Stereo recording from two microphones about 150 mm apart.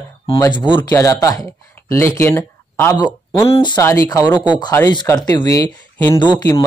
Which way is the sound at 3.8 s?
20° left (ahead or behind).